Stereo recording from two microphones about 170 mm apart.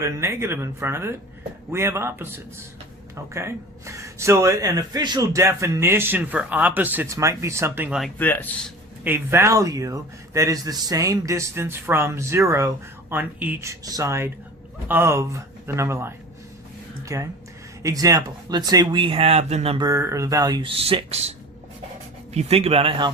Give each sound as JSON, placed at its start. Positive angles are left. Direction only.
{"t": 0.0, "sound": "a man's voice", "side_deg": -15}
{"t": 8.2, "sound": "speech", "side_deg": 10}
{"t": 9.0, "sound": "a man's voice", "side_deg": -15}
{"t": 19.8, "sound": "speech", "side_deg": -15}